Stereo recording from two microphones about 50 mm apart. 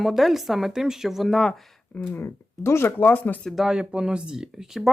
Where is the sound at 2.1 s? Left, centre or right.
Left.